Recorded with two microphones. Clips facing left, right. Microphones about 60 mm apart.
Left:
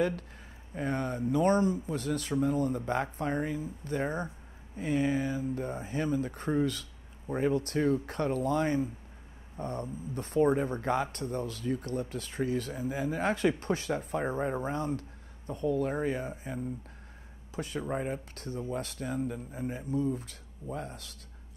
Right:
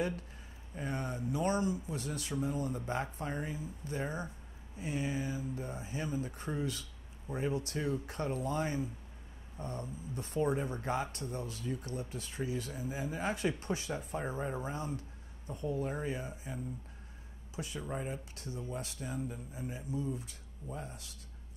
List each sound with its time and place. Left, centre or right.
0.7 s speech: left
17.6 s speech: left